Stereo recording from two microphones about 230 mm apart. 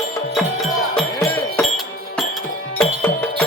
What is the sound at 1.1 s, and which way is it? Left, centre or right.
Music, centre.